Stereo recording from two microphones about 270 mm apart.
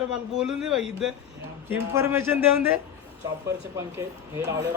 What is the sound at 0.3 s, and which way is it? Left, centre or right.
A man's voice, centre.